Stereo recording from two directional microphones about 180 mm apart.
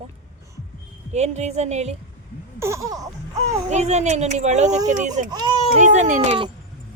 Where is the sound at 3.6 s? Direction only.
40° right (ahead or behind).